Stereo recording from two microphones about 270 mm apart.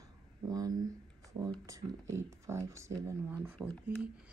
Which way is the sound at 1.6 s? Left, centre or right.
Centre.